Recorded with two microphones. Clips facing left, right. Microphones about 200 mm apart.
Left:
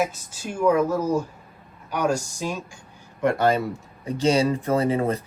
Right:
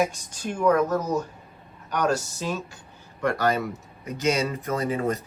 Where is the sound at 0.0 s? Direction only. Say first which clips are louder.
Right 1 dB; 5° left (ahead or behind).